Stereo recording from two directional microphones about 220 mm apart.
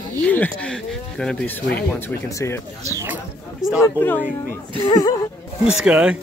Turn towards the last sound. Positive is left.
turn(degrees=-5)  # may be behind; listen again after turning